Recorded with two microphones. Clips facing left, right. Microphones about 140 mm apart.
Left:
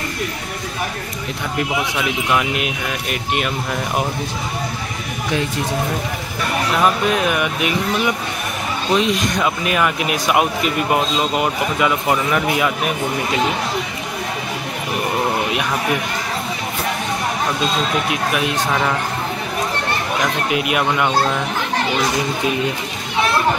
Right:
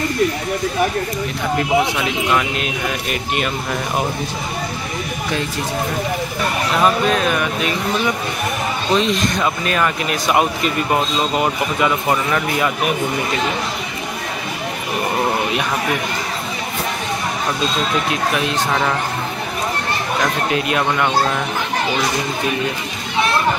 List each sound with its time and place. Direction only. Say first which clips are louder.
2.3 s speech: even; 10° left (ahead or behind)
6.8 s speech: right 2 dB; 15° left (ahead or behind)
20.5 s speech: left 2 dB; 10° left (ahead or behind)